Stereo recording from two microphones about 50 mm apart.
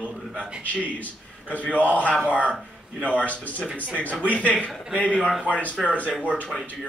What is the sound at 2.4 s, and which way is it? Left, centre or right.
Speech, right.